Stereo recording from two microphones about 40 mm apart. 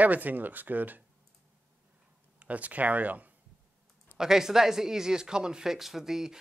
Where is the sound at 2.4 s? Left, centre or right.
Right.